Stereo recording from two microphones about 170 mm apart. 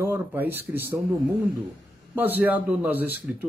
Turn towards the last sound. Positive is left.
turn(degrees=-10)  # may be behind; listen again after turning